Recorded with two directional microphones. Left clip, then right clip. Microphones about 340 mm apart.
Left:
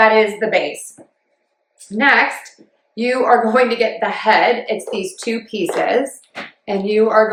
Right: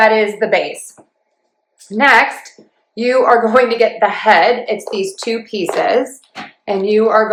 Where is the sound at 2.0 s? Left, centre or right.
Centre.